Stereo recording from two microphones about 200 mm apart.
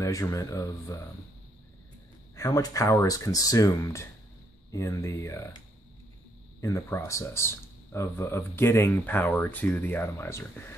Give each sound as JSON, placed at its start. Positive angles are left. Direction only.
{"t": 0.0, "sound": "speech", "side_deg": 15}
{"t": 2.3, "sound": "speech", "side_deg": 15}
{"t": 6.6, "sound": "speech", "side_deg": 15}